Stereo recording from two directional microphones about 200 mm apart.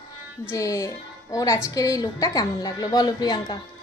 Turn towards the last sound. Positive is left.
turn(degrees=20)  # may be behind; listen again after turning